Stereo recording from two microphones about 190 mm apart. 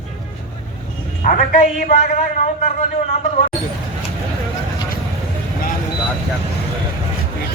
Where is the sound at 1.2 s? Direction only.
45° left (ahead or behind).